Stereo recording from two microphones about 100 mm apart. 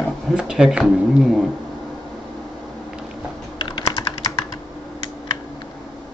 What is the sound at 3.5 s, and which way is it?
Computer keyboard, 40° left (ahead or behind).